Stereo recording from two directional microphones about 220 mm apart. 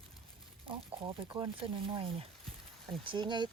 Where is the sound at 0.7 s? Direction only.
25° right (ahead or behind).